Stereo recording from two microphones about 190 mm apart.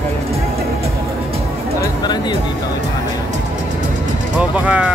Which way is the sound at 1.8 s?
20° left (ahead or behind).